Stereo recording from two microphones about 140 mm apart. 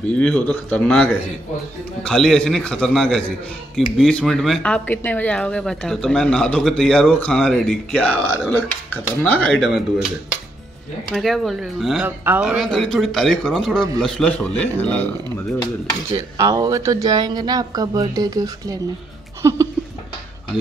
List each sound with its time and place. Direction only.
0.2 s speech: 10° left (ahead or behind)
11.1 s speech: centre (ahead or behind)
12.6 s speech: 5° left (ahead or behind)
16.3 s speech: 25° right (ahead or behind)